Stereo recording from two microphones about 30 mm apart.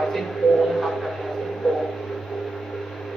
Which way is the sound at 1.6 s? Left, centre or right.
Right.